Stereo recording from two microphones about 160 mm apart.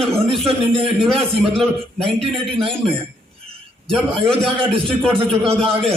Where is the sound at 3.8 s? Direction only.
5° left (ahead or behind).